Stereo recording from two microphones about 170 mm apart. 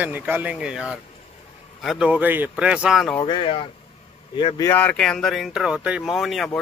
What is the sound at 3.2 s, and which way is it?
Speech, 30° left (ahead or behind).